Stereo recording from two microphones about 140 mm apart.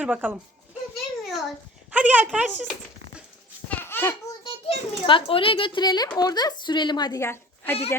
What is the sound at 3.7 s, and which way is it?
Babbling, 15° left (ahead or behind).